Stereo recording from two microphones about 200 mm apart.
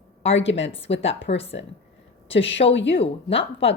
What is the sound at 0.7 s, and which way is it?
Speech, 30° left (ahead or behind).